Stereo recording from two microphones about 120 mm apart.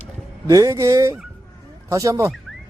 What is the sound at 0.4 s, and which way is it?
Speech, 25° right (ahead or behind).